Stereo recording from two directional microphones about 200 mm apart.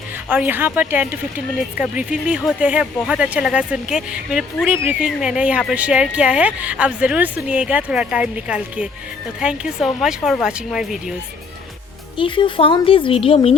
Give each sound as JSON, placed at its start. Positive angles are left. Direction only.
{"t": 0.3, "sound": "speech", "side_deg": -10}
{"t": 12.1, "sound": "speech", "side_deg": 25}